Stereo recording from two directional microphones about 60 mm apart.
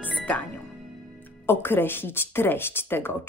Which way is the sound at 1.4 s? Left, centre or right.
Left.